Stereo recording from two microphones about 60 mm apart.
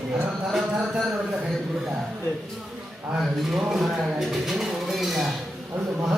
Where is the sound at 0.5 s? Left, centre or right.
Centre.